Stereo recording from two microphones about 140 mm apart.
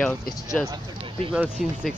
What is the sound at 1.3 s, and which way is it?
Speech, 5° right (ahead or behind).